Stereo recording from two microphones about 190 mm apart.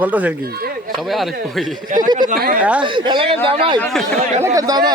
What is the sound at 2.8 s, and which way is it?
Speech, 25° right (ahead or behind).